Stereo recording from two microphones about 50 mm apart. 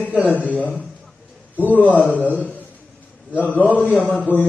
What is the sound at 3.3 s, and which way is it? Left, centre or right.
Speech, right.